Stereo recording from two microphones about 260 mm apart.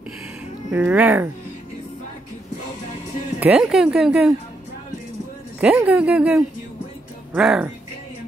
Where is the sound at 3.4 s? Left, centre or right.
Centre.